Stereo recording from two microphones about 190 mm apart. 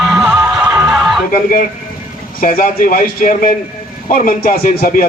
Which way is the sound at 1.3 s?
45° left (ahead or behind).